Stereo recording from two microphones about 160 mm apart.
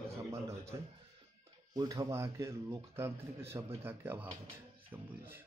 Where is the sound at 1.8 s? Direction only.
25° right (ahead or behind).